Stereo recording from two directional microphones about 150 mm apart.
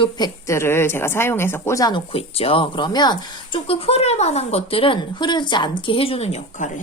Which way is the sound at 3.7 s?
40° left (ahead or behind).